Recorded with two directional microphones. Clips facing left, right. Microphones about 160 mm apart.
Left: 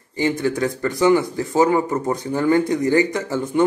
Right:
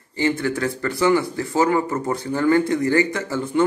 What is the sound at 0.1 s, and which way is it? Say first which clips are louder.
Speech: left 1 dB; 15° left (ahead or behind).